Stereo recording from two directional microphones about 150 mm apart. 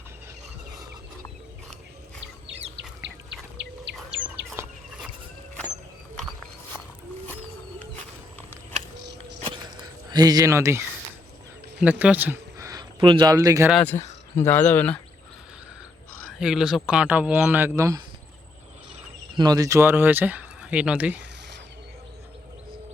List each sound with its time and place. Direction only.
4.6 s chicken: 20° right (ahead or behind)
9.8 s speech: 25° right (ahead or behind)
13.0 s a man's voice: 35° right (ahead or behind)
13.3 s speech: 20° right (ahead or behind)
13.8 s speech: 15° left (ahead or behind)
16.4 s speech: 5° right (ahead or behind); by 18.0 s 20° right (ahead or behind)
19.4 s speech: 25° right (ahead or behind); by 21.2 s 10° right (ahead or behind)